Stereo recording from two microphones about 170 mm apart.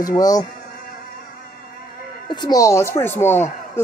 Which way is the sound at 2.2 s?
25° left (ahead or behind).